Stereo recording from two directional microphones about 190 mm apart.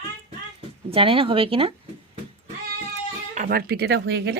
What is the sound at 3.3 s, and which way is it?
Speech, 45° right (ahead or behind).